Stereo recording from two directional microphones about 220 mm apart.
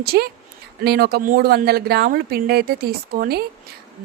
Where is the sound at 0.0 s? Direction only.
45° right (ahead or behind).